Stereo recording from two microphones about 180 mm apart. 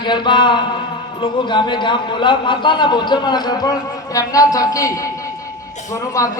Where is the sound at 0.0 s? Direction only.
25° left (ahead or behind).